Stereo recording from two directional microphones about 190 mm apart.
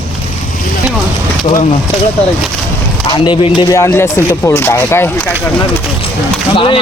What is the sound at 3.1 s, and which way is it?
Speech, 25° left (ahead or behind).